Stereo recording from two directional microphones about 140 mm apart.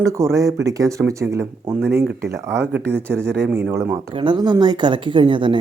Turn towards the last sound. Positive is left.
turn(degrees=-35)  # may be behind; listen again after turning